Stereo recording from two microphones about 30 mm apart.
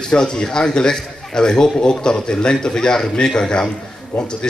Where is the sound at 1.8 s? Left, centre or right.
Left.